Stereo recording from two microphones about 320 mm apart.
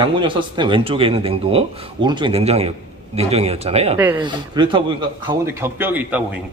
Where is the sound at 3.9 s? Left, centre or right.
Centre.